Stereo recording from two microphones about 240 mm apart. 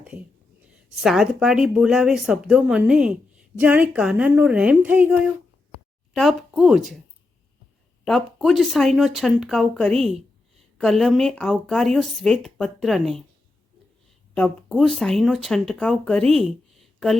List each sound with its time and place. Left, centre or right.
1.0 s speech: centre
6.5 s speech: centre
8.0 s speech: centre
14.3 s speech: centre